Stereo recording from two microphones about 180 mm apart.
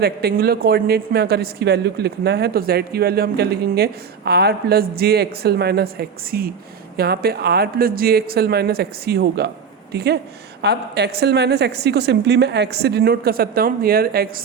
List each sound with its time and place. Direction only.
0.0 s a man's voice: 60° right (ahead or behind)